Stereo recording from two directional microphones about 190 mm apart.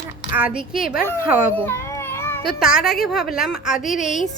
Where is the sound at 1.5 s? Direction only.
10° left (ahead or behind).